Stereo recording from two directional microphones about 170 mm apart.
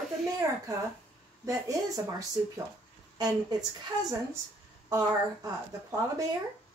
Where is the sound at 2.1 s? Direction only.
20° right (ahead or behind).